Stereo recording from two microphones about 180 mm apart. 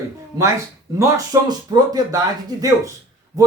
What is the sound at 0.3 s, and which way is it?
Speech, 20° right (ahead or behind).